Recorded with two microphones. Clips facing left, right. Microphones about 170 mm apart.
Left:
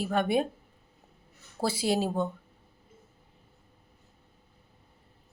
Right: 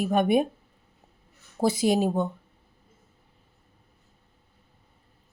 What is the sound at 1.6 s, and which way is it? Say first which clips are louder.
Speech: right 5 dB; 20° right (ahead or behind).